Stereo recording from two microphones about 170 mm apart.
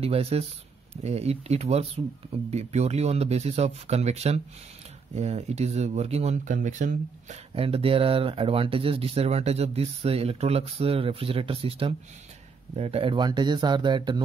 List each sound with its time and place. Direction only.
0.0 s speech: 35° right (ahead or behind)
7.5 s speech: 35° right (ahead or behind)